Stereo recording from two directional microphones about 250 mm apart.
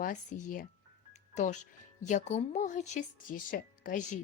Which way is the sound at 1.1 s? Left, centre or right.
Left.